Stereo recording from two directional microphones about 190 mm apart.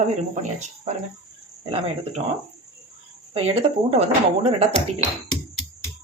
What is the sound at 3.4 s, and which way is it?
Speech, 30° right (ahead or behind).